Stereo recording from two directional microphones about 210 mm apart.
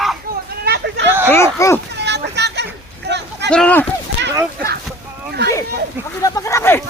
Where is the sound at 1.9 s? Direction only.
55° right (ahead or behind).